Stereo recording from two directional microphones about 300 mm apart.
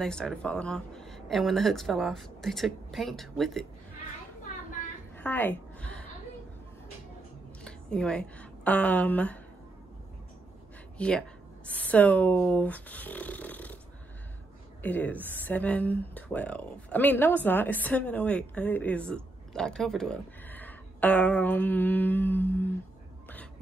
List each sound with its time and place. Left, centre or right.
0.0 s speech: centre
5.1 s a sound: centre
7.6 s a woman's voice: centre
11.0 s speech: centre
14.8 s a woman's voice: centre